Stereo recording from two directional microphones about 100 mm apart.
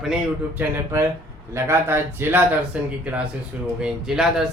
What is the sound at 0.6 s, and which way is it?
A man's voice, 30° right (ahead or behind).